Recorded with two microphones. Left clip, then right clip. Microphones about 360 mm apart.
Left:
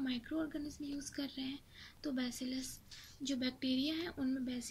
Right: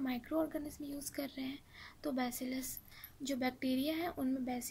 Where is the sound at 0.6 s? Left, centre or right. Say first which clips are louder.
Even; centre.